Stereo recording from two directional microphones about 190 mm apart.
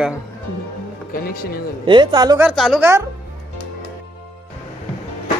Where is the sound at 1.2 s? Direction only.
50° left (ahead or behind).